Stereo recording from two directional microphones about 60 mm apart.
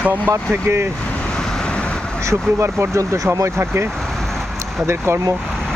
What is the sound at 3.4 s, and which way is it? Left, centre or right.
Speech, right.